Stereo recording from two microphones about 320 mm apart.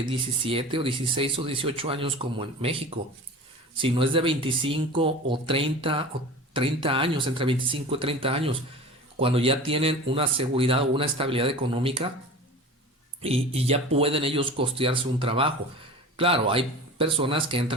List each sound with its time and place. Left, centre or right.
0.1 s speech: centre
13.2 s speech: centre